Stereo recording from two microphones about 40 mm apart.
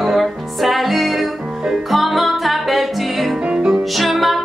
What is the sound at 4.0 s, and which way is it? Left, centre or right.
Music, centre.